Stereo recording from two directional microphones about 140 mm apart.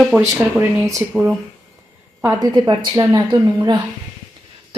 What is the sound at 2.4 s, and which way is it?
A woman's voice, 30° right (ahead or behind).